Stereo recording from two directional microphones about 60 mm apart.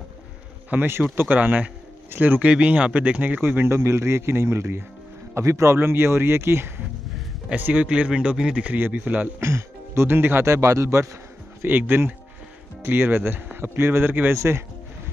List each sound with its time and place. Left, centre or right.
0.7 s speech: right
3.7 s speech: right
5.3 s a man's voice: right
5.8 s speech: right
7.4 s speech: right
8.7 s speech: right
9.4 s speech: right
10.0 s speech: right
10.4 s speech: right
11.6 s speech: right
14.3 s speech: right